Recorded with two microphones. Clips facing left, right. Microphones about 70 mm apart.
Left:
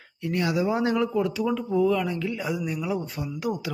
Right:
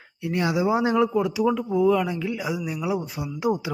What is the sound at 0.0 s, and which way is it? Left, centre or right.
Speech, centre.